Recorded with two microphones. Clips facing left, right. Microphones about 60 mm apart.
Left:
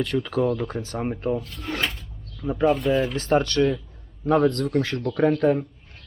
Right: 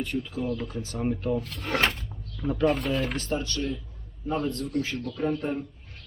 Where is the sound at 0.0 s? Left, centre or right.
Left.